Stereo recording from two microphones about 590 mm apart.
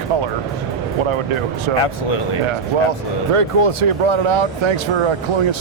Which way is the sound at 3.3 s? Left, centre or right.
Right.